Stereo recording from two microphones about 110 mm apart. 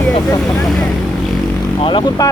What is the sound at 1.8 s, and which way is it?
Speech, 45° left (ahead or behind).